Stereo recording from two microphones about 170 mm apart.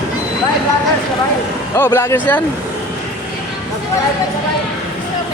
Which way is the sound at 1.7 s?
15° left (ahead or behind).